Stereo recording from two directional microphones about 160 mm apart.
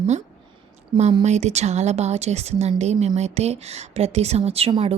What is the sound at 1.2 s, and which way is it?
A woman's voice, 45° right (ahead or behind).